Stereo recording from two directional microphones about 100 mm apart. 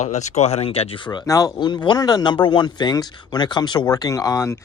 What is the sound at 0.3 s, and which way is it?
Speech, 90° left.